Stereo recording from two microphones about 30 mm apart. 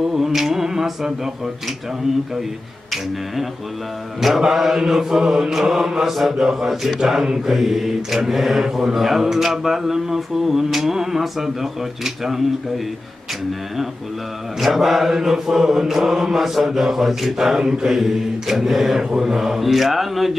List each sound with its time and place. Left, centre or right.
0.0 s a sound: centre
4.4 s speech: centre
5.2 s mantra: right
5.5 s speech: centre
6.7 s speech: centre
7.4 s mantra: centre
8.2 s speech: centre
14.6 s speech: centre